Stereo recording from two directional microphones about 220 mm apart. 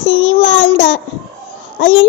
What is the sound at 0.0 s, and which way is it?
Child singing, 65° left (ahead or behind).